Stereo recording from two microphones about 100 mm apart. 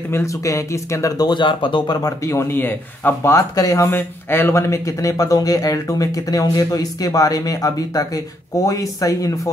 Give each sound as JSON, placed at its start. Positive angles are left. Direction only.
{"t": 0.1, "sound": "speech", "side_deg": 30}
{"t": 2.0, "sound": "speech", "side_deg": 30}
{"t": 3.3, "sound": "speech", "side_deg": 35}